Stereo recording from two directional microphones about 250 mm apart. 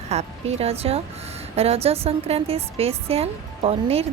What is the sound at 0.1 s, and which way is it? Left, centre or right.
A woman's voice, right.